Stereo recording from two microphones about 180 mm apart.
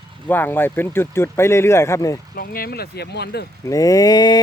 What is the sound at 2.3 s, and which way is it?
Speech, 55° left (ahead or behind).